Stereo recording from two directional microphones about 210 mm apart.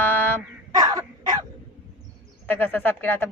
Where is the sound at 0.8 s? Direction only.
15° right (ahead or behind).